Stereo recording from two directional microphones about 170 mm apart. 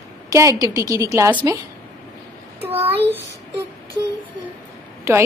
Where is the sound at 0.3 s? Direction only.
20° right (ahead or behind).